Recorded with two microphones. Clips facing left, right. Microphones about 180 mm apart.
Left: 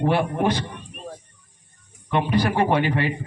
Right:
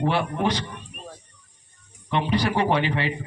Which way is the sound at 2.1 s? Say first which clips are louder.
Left 2 dB; 50° left (ahead or behind).